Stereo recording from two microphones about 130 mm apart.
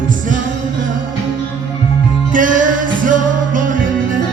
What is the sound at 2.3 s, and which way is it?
Music, 90° right.